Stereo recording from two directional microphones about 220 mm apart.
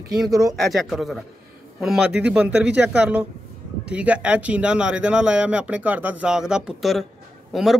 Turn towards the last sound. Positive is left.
turn(degrees=0)  # may be behind; listen again after turning